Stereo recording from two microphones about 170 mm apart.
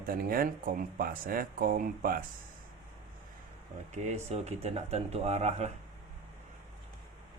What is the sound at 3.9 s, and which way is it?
Speech, 45° right (ahead or behind).